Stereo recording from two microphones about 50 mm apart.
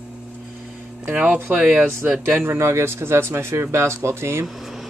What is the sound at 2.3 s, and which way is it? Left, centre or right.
Speech, right.